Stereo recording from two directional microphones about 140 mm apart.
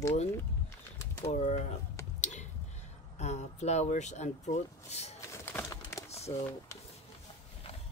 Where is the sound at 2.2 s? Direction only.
55° left (ahead or behind).